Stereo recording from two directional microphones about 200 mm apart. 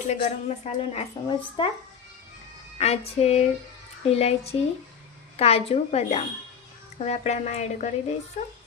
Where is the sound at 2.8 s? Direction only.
30° left (ahead or behind).